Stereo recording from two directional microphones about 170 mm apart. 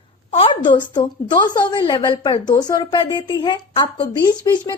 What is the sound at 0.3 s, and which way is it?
A woman's voice, 30° left (ahead or behind).